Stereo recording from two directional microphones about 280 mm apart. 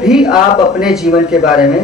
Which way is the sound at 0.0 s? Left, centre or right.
Centre.